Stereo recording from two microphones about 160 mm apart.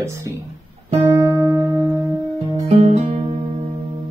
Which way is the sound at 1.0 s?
20° right (ahead or behind).